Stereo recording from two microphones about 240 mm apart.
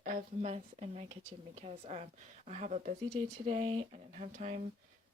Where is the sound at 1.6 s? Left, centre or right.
Right.